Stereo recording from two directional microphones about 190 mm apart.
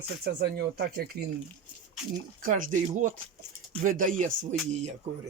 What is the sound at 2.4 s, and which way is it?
Speech, 45° right (ahead or behind).